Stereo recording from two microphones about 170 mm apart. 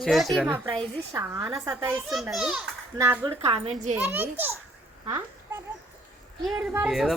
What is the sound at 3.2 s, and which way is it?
Speech, 35° right (ahead or behind).